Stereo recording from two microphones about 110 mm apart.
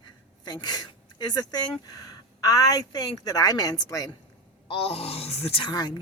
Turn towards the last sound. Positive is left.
turn(degrees=40)  # may be behind; listen again after turning